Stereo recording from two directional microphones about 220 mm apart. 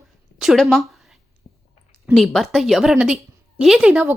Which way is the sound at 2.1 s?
Centre (ahead or behind).